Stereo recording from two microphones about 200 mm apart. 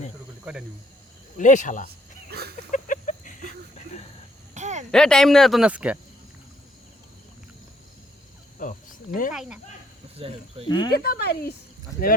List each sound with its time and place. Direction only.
1.4 s speech: 40° left (ahead or behind)
2.3 s a sound: 50° right (ahead or behind)
2.7 s a sound: 40° left (ahead or behind)
4.5 s a sound: 35° right (ahead or behind)
4.9 s speech: 5° left (ahead or behind)
8.5 s cricket: 40° left (ahead or behind)
9.3 s speech: 5° right (ahead or behind)
10.2 s speech: 30° right (ahead or behind)
10.7 s speech: 20° left (ahead or behind)
10.9 s speech: 50° left (ahead or behind)